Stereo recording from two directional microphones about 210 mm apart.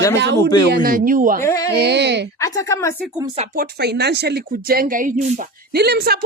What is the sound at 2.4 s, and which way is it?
Speech, 15° left (ahead or behind).